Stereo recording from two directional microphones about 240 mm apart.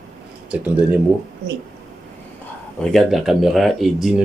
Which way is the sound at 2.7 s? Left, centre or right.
Centre.